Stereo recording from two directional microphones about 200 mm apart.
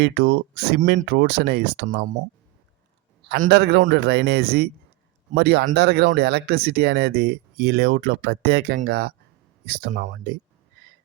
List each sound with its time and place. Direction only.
0.0 s speech: 55° right (ahead or behind)
3.2 s a man's voice: 50° right (ahead or behind)